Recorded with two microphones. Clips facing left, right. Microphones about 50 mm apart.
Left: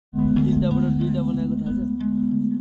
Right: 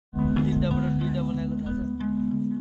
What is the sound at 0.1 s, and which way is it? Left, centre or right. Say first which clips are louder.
Music: left 5 dB; centre.